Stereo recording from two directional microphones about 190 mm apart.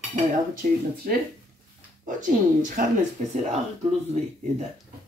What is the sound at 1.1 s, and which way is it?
Speech, 45° right (ahead or behind).